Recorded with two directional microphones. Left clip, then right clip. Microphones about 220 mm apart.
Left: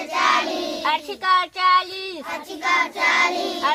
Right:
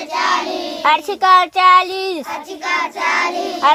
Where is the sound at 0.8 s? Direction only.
45° right (ahead or behind).